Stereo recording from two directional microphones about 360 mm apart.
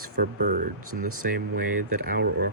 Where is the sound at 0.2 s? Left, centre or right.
Right.